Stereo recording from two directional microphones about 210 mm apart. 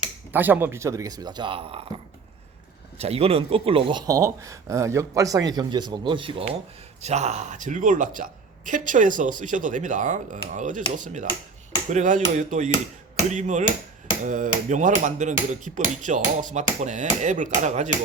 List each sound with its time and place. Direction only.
0.3 s speech: 10° right (ahead or behind); by 1.9 s 25° right (ahead or behind)
3.0 s a woman's voice: 30° right (ahead or behind)